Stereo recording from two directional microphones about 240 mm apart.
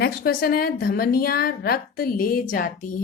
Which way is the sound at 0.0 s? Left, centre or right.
Left.